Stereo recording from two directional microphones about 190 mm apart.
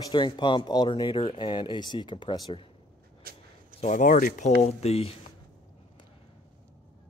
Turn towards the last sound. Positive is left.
turn(degrees=30)  # may be behind; listen again after turning